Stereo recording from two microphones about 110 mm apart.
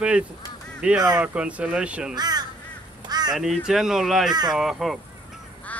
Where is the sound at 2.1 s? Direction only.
40° right (ahead or behind).